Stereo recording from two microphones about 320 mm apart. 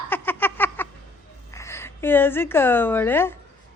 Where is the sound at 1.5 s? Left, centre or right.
Centre.